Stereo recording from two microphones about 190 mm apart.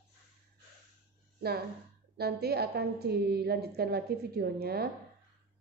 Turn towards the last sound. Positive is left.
turn(degrees=-55)  # may be behind; listen again after turning